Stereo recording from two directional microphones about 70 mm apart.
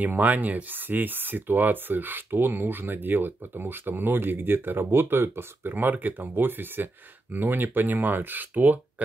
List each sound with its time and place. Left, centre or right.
0.0 s speech: right